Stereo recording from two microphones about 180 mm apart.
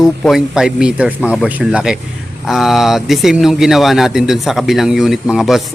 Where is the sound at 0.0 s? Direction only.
Centre (ahead or behind).